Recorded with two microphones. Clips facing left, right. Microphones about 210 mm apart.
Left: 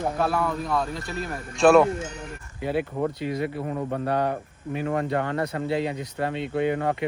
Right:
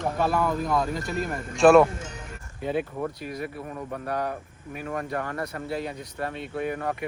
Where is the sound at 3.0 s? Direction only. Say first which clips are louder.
Left 5 dB; 25° left (ahead or behind).